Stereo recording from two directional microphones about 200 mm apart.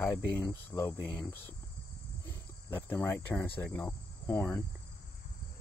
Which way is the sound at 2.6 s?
10° left (ahead or behind).